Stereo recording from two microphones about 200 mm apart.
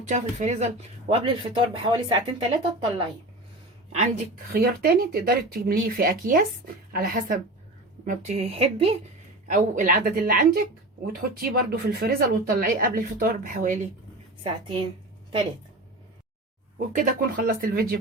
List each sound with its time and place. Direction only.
0.1 s speech: 35° right (ahead or behind)
4.5 s speech: 50° right (ahead or behind)
8.0 s a woman's voice: 35° right (ahead or behind)
14.4 s speech: 25° right (ahead or behind)
16.7 s speech: 40° right (ahead or behind)